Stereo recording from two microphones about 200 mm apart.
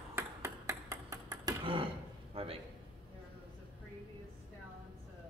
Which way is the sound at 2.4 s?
30° right (ahead or behind).